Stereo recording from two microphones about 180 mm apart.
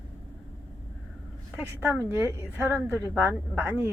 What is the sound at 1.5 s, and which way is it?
A woman's voice, 10° right (ahead or behind).